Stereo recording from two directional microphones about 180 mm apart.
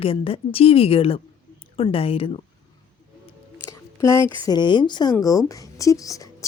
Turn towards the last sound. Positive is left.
turn(degrees=20)  # may be behind; listen again after turning